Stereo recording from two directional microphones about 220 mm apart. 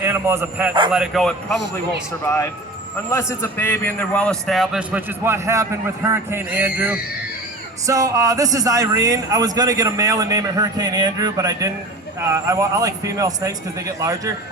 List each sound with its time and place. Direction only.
0.0 s speech: 10° right (ahead or behind)
0.9 s a man's voice: centre (ahead or behind)
2.2 s a man's voice: 10° left (ahead or behind); by 14.3 s 15° right (ahead or behind)